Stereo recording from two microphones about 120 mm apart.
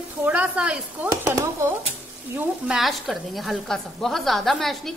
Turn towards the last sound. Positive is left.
turn(degrees=0)  # may be behind; listen again after turning